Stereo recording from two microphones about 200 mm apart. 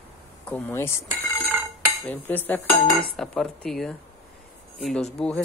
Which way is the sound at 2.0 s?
10° left (ahead or behind).